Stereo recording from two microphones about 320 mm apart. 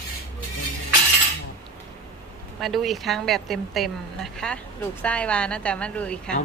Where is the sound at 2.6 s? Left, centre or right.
Centre.